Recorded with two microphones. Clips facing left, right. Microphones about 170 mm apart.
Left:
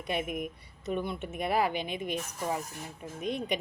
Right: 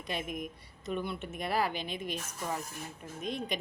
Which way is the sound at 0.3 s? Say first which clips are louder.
Left 3 dB; 60° left (ahead or behind).